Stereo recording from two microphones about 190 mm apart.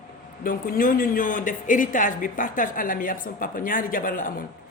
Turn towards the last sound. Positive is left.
turn(degrees=45)  # may be behind; listen again after turning